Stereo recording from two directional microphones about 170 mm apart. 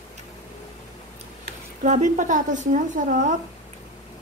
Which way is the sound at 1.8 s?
45° right (ahead or behind).